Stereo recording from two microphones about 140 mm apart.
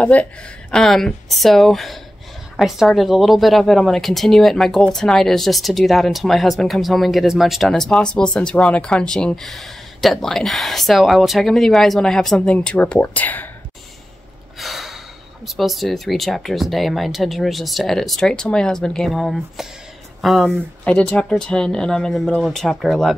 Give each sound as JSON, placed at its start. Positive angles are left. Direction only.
{"t": 0.0, "sound": "a woman's voice", "side_deg": 10}
{"t": 14.6, "sound": "gasp", "side_deg": 0}
{"t": 15.4, "sound": "a woman's voice", "side_deg": 0}